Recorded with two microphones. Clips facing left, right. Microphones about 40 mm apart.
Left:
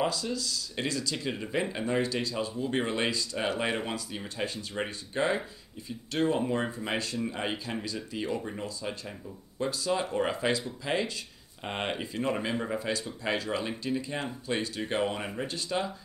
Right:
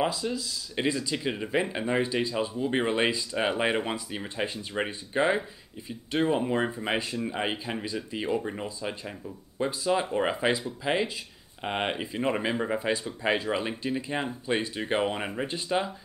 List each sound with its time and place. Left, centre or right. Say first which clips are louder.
0.0 s speech: right 2 dB; centre